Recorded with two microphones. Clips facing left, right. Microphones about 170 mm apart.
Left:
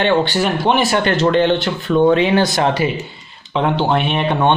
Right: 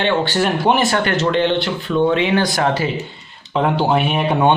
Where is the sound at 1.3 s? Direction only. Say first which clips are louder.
Left 2 dB; 45° left (ahead or behind).